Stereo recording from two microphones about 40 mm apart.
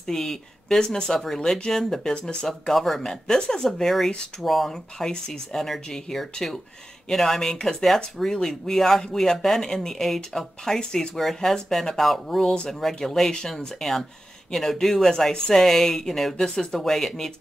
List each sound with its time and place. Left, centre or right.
0.0 s speech: centre
4.4 s speech: centre
5.1 s speech: left
5.6 s speech: centre